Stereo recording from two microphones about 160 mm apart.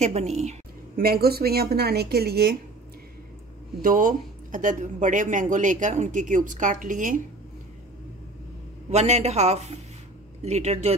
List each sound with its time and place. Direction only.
0.0 s speech: 45° right (ahead or behind)
0.9 s speech: 70° right (ahead or behind)
3.8 s speech: 60° right (ahead or behind)
8.9 s speech: 45° right (ahead or behind)